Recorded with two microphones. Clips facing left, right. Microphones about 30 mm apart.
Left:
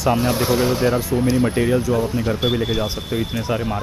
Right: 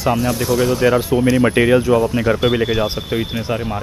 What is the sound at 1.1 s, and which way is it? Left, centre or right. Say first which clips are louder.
Speech: right 4 dB; centre.